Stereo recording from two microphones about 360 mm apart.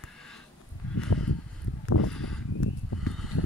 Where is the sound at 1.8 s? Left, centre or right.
Left.